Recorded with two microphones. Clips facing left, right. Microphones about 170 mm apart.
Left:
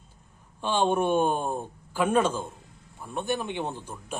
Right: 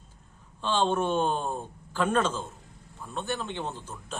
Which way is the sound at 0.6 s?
15° left (ahead or behind).